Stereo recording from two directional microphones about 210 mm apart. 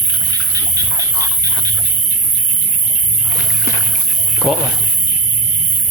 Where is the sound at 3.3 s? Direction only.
15° left (ahead or behind).